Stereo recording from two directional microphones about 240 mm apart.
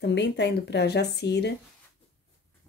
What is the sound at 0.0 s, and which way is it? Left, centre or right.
Speech, left.